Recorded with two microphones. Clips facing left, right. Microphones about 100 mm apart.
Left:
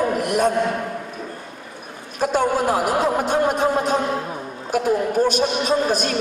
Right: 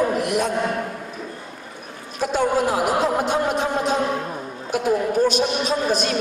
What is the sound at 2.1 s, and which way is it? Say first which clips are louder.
A man's voice: left 1 dB; 50° left (ahead or behind).